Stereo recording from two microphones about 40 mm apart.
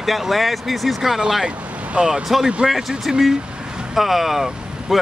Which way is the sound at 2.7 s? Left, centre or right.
Centre.